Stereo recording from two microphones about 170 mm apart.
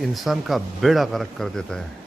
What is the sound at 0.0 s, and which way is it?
A man's voice, centre (ahead or behind).